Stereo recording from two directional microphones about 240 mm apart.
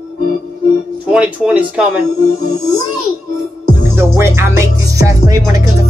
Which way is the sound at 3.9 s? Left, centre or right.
Centre.